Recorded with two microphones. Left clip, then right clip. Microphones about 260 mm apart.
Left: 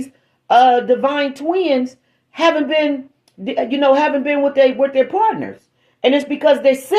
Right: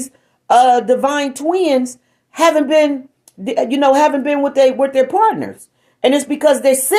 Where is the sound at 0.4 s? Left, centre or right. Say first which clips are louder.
Right 1 dB; right.